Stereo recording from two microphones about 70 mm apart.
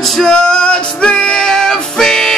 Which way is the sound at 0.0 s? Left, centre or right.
Centre.